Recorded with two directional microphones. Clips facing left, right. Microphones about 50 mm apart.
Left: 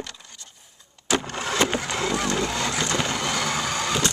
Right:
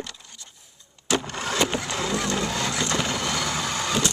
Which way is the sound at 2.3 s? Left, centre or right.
Centre.